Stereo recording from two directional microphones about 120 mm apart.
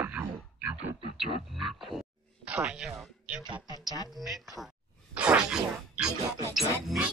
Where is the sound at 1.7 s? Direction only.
Centre (ahead or behind).